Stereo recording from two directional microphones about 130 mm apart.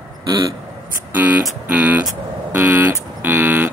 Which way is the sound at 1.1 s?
15° right (ahead or behind).